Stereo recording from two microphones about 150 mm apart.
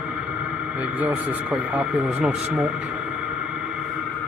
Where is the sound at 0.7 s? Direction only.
10° right (ahead or behind).